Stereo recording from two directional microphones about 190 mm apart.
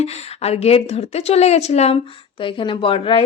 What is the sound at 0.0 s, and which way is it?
A woman's voice, 35° left (ahead or behind).